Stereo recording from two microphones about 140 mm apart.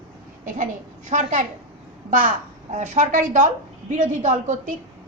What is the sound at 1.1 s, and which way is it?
Speech, 60° right (ahead or behind).